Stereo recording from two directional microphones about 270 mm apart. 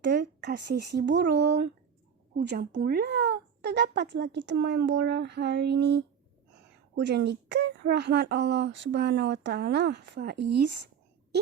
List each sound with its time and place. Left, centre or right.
0.0 s speech: right